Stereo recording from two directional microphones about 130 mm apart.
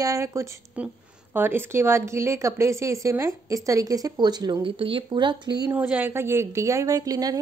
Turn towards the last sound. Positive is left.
turn(degrees=-30)  # may be behind; listen again after turning